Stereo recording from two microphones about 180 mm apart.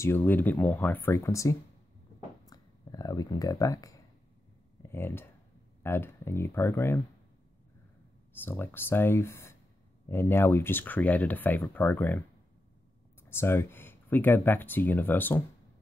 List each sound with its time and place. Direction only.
0.0 s speech: 10° left (ahead or behind)
2.5 s a sound: 20° left (ahead or behind)
4.8 s speech: 15° left (ahead or behind)
8.3 s speech: 10° left (ahead or behind)
13.2 s speech: 15° left (ahead or behind)